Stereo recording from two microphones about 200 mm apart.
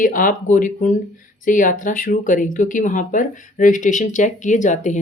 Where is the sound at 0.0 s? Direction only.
40° left (ahead or behind).